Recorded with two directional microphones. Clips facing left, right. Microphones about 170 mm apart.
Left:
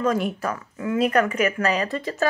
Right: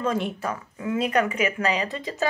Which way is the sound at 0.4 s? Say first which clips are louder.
Left 2 dB; 15° right (ahead or behind).